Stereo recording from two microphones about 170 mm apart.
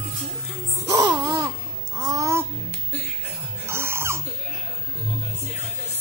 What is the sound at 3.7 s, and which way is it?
Dog, 15° right (ahead or behind).